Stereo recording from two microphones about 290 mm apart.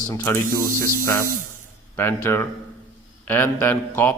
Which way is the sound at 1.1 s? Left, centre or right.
Right.